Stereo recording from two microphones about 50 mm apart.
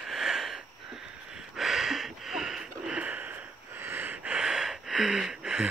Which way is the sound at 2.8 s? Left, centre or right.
Right.